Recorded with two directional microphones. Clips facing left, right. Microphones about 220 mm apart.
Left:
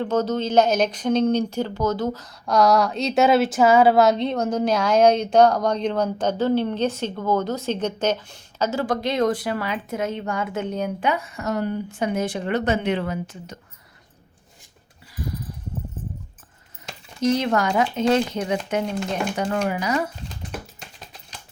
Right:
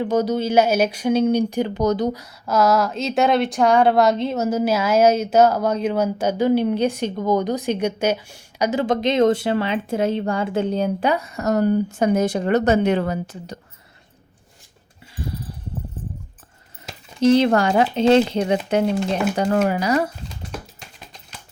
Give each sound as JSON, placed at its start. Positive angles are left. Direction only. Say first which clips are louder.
{"t": 0.0, "sound": "speech", "louder": "right 2 dB", "side_deg": -10}
{"t": 15.1, "sound": "a sound", "louder": "right 1 dB", "side_deg": -30}
{"t": 17.2, "sound": "speech", "louder": "right 6 dB", "side_deg": -30}